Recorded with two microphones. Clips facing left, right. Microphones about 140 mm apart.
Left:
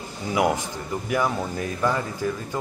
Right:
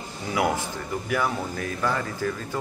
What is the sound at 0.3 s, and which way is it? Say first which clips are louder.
Speech: left 2 dB; 20° left (ahead or behind).